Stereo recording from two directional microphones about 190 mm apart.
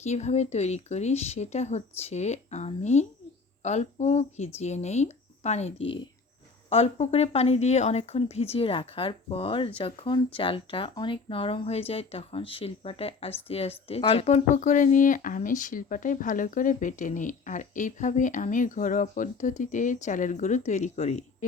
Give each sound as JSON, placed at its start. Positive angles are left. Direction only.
{"t": 0.0, "sound": "speech", "side_deg": 35}